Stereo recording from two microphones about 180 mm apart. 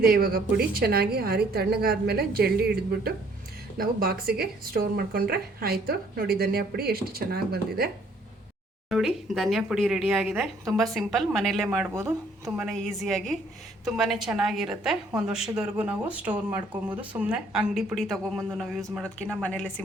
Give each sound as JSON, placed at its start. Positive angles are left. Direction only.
{"t": 0.0, "sound": "a woman's voice", "side_deg": -55}
{"t": 8.9, "sound": "a woman's voice", "side_deg": 0}